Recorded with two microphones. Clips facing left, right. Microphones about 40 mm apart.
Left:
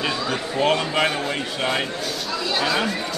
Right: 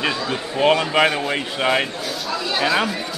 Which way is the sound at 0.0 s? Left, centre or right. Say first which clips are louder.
Right 1 dB; centre.